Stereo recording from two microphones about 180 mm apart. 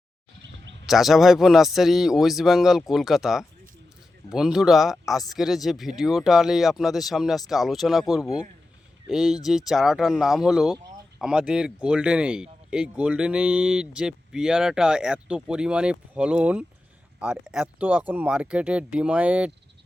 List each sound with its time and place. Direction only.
0.9 s speech: centre (ahead or behind)